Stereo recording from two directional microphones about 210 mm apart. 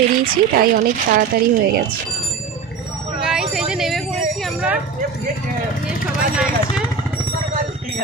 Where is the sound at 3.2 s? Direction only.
5° right (ahead or behind).